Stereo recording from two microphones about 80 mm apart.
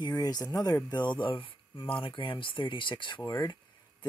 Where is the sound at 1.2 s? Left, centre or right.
Left.